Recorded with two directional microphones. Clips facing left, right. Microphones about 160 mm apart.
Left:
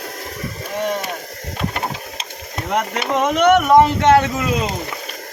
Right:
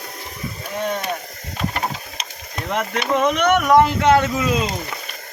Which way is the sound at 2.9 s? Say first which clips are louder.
Right 2 dB; 25° left (ahead or behind).